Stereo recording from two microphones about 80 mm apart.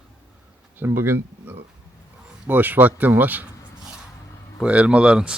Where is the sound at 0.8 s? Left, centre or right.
Right.